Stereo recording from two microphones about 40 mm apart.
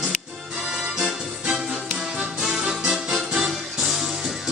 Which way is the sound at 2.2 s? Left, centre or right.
Centre.